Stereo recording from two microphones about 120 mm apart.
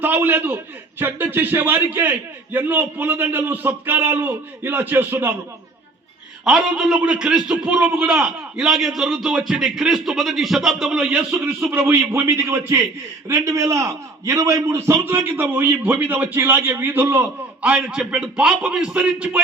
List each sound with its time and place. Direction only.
0.0 s a man's voice: 15° right (ahead or behind)
6.4 s a man's voice: 5° right (ahead or behind)
11.1 s a man's voice: 15° right (ahead or behind)